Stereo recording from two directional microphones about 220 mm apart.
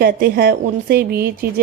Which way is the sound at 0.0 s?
45° right (ahead or behind).